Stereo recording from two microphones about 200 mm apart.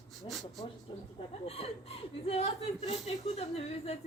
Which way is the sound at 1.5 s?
30° left (ahead or behind).